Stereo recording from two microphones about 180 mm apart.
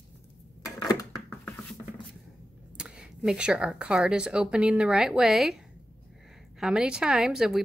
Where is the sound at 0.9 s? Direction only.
15° left (ahead or behind).